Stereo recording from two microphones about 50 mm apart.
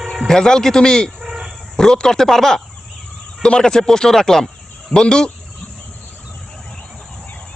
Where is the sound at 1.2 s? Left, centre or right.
Centre.